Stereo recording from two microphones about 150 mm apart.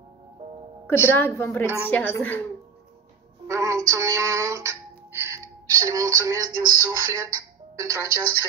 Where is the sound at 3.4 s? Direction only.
20° right (ahead or behind).